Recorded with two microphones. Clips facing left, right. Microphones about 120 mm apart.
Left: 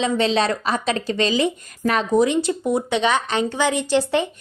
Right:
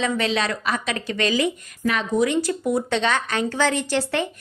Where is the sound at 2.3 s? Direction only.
20° left (ahead or behind).